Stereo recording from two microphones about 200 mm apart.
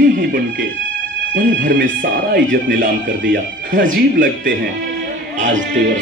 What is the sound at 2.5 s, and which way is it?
Speech, 45° right (ahead or behind).